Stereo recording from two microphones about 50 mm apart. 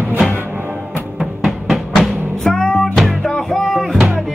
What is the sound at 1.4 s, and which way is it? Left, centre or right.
Music, centre.